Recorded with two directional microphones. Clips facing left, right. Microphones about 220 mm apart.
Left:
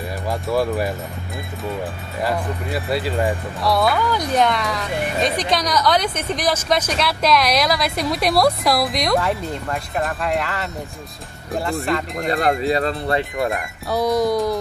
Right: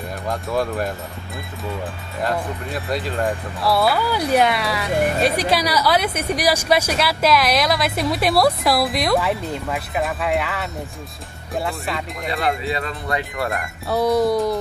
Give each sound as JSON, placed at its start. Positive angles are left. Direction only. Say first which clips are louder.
{"t": 0.3, "sound": "a woman's voice", "louder": "left 2 dB", "side_deg": 5}
{"t": 2.2, "sound": "a woman's voice", "louder": "left 1 dB", "side_deg": 5}
{"t": 11.9, "sound": "a woman's voice", "louder": "left 6 dB", "side_deg": -5}
{"t": 12.3, "sound": "speech", "louder": "left 4 dB", "side_deg": 45}
{"t": 13.6, "sound": "a woman's voice", "louder": "right 1 dB", "side_deg": -5}